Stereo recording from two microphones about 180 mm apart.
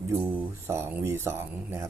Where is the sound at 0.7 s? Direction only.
15° right (ahead or behind).